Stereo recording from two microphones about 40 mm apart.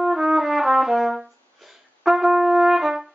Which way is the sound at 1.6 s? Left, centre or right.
Centre.